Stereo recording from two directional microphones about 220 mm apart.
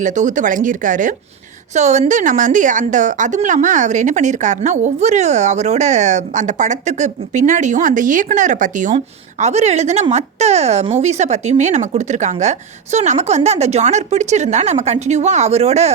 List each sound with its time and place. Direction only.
0.0 s a woman's voice: 35° right (ahead or behind)